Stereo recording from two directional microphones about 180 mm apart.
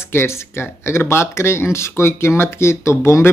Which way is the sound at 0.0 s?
15° left (ahead or behind).